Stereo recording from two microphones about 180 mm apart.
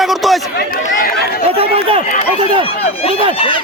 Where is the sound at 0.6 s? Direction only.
60° left (ahead or behind).